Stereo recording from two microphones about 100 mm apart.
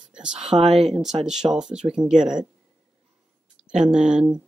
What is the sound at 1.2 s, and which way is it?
Speech, 5° right (ahead or behind).